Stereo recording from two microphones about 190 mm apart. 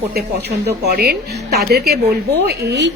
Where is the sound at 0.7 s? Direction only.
55° right (ahead or behind).